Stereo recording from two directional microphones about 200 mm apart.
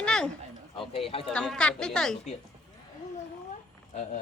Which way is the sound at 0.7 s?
25° left (ahead or behind).